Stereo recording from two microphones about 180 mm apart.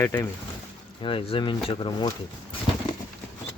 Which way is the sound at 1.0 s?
30° left (ahead or behind).